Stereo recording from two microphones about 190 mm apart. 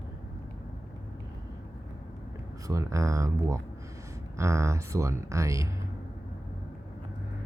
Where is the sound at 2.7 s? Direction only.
15° right (ahead or behind).